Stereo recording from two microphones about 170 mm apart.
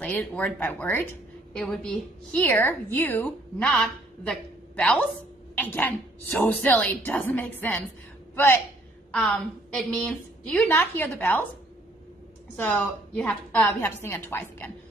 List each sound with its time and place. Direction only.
0.0 s a woman's voice: 10° left (ahead or behind)
9.1 s a woman's voice: 5° left (ahead or behind)
12.5 s a woman's voice: 10° left (ahead or behind)